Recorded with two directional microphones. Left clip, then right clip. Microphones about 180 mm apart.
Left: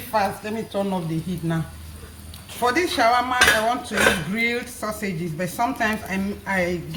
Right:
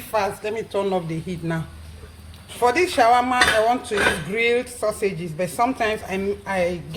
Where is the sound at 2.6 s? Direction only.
35° right (ahead or behind).